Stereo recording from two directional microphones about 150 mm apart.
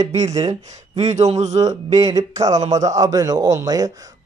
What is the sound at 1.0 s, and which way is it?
Speech, 50° right (ahead or behind).